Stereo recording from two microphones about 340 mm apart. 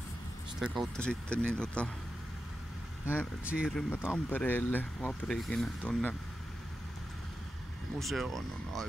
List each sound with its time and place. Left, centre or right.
0.6 s speech: centre
3.4 s speech: centre
8.0 s speech: centre